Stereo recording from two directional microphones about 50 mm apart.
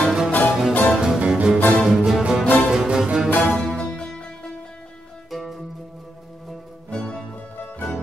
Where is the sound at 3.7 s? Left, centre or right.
Centre.